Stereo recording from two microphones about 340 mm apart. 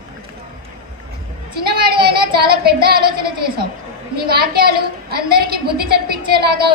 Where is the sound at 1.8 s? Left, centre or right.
Centre.